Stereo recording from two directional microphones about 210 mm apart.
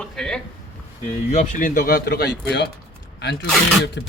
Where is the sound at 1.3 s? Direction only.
35° left (ahead or behind); by 2.6 s 50° left (ahead or behind).